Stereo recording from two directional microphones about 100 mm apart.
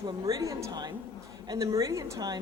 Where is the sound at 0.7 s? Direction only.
45° right (ahead or behind).